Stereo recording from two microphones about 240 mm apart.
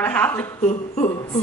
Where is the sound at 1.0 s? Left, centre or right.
Centre.